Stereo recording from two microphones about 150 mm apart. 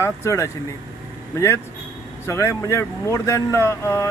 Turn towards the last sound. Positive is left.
turn(degrees=20)  # may be behind; listen again after turning